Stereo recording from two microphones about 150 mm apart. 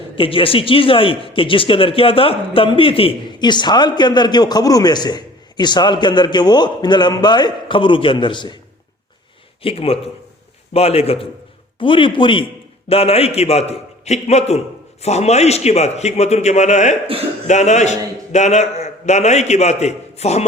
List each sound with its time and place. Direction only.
0.2 s speech: 35° left (ahead or behind)
9.6 s a man's voice: 40° left (ahead or behind)